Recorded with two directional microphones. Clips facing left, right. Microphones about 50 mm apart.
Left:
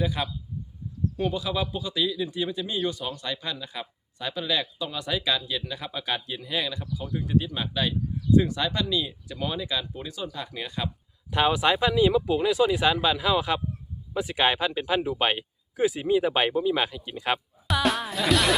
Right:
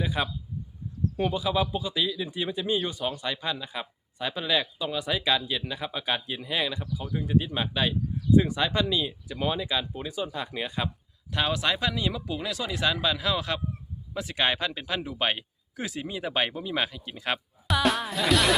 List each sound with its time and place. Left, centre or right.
0.0 s speech: centre
11.3 s speech: centre